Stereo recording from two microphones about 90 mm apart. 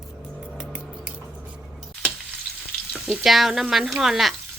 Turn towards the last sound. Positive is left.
turn(degrees=-5)  # may be behind; listen again after turning